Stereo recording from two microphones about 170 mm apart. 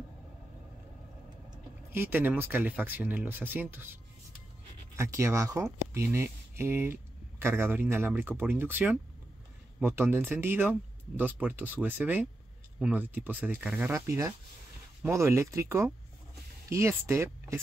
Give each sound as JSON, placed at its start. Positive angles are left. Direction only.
{"t": 1.9, "sound": "speech", "side_deg": -15}